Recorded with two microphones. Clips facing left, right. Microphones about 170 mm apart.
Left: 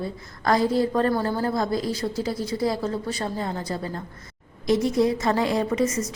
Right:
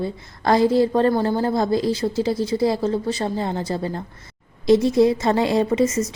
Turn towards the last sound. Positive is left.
turn(degrees=-25)  # may be behind; listen again after turning